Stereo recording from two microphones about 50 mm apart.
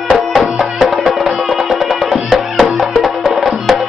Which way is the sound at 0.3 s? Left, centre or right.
Centre.